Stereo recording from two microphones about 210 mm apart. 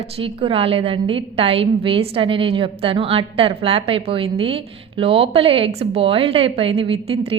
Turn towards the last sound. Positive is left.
turn(degrees=-25)  # may be behind; listen again after turning